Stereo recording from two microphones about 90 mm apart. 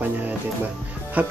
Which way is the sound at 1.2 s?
15° right (ahead or behind).